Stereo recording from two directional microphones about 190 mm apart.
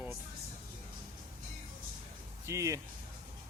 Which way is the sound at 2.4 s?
15° right (ahead or behind).